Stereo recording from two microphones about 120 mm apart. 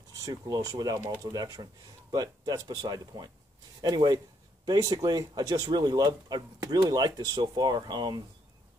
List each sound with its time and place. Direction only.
0.2 s speech: 30° right (ahead or behind)